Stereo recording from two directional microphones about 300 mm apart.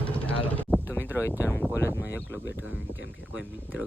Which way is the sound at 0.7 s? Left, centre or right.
Centre.